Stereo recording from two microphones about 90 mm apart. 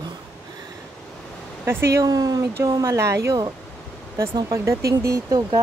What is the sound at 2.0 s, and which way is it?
Speech, 45° right (ahead or behind).